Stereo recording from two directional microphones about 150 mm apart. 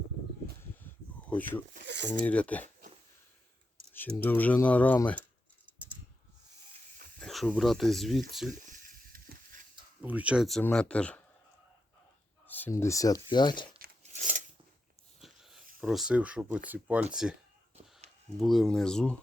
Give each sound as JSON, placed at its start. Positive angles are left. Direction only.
{"t": 0.4, "sound": "a sound", "side_deg": 15}
{"t": 2.2, "sound": "speech", "side_deg": 10}
{"t": 3.9, "sound": "speech", "side_deg": 10}
{"t": 7.2, "sound": "speech", "side_deg": 5}
{"t": 9.1, "sound": "a sound", "side_deg": -70}
{"t": 10.0, "sound": "speech", "side_deg": -10}
{"t": 12.5, "sound": "speech", "side_deg": 10}
{"t": 14.0, "sound": "biting", "side_deg": -55}
{"t": 15.2, "sound": "a sound", "side_deg": 0}
{"t": 15.8, "sound": "speech", "side_deg": 0}
{"t": 18.3, "sound": "speech", "side_deg": 0}